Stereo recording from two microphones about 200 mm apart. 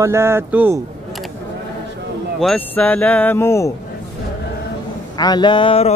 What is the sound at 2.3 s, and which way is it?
Speech, 5° left (ahead or behind).